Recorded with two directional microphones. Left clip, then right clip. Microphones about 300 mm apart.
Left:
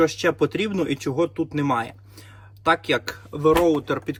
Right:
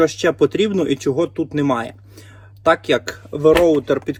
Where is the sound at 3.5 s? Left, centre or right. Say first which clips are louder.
Right 5 dB; right.